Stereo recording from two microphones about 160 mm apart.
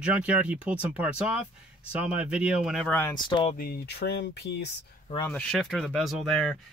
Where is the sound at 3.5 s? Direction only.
70° left (ahead or behind); by 4.7 s 90° left.